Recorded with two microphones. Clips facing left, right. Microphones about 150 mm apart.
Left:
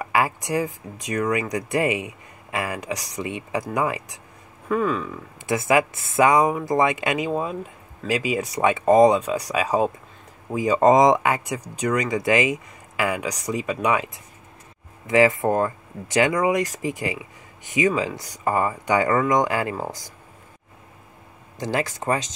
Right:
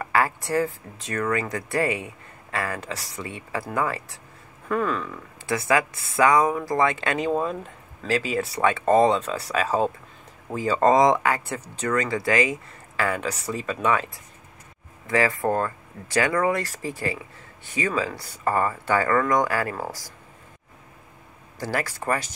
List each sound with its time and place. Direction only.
0.0 s speech: 15° left (ahead or behind)
4.6 s speech: 5° left (ahead or behind)
5.5 s speech: 20° left (ahead or behind)
21.5 s speech: 20° left (ahead or behind)